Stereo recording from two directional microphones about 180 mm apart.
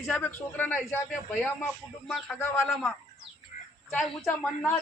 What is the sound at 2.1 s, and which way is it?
Speech, centre (ahead or behind).